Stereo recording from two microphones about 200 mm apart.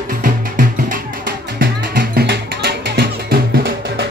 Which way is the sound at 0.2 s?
40° right (ahead or behind).